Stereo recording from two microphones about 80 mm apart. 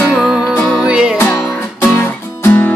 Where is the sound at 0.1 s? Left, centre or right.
Centre.